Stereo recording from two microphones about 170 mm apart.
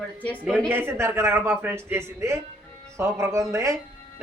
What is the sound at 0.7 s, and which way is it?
A man's voice, 15° right (ahead or behind).